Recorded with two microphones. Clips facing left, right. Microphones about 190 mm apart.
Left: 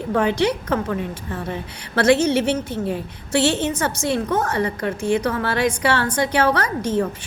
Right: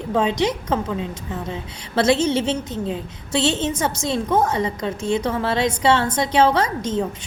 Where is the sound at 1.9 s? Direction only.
25° right (ahead or behind).